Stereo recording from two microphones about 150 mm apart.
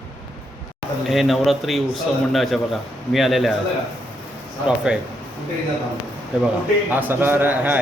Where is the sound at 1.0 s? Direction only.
Centre (ahead or behind).